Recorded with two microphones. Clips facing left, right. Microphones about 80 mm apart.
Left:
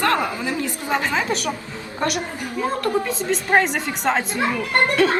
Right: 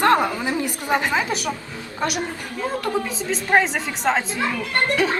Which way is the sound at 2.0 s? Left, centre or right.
Centre.